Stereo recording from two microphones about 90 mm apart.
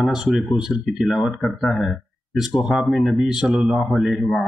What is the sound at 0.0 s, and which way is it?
Speech, centre (ahead or behind).